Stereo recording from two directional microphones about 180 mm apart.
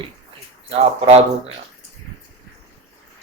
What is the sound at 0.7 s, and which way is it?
Speech, 35° right (ahead or behind).